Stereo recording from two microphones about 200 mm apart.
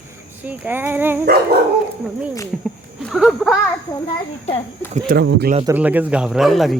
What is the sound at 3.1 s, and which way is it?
Speech, centre (ahead or behind).